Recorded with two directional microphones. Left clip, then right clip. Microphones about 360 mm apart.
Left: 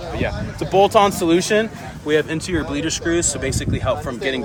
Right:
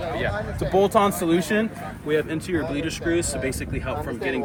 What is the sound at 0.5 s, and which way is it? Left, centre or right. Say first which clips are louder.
Speech: left 6 dB; left.